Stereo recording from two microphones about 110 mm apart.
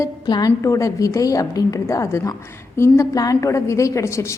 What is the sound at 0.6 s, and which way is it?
A woman's voice, 30° left (ahead or behind).